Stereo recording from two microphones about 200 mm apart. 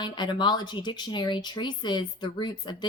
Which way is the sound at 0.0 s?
20° left (ahead or behind).